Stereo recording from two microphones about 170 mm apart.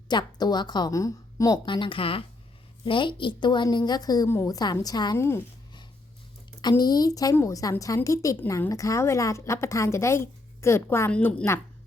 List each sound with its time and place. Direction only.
0.1 s a woman's voice: 25° left (ahead or behind)
6.6 s a woman's voice: 25° left (ahead or behind)